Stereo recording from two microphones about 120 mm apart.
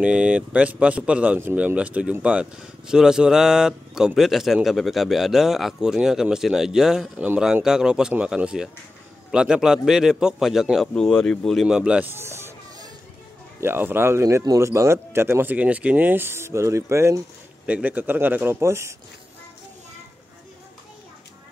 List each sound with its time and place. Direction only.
0.0 s speech: 10° right (ahead or behind)
11.6 s speech: 10° right (ahead or behind)
13.6 s speech: 20° right (ahead or behind)
17.6 s speech: 10° right (ahead or behind)